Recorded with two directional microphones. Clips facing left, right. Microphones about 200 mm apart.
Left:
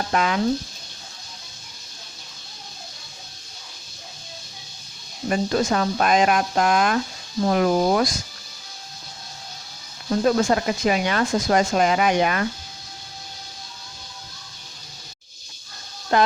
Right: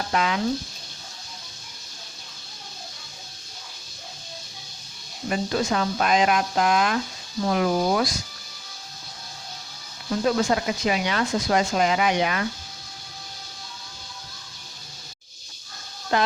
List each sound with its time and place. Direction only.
0.1 s speech: 45° left (ahead or behind)
5.3 s speech: 45° left (ahead or behind)
10.2 s speech: 45° left (ahead or behind)
16.1 s speech: 50° left (ahead or behind)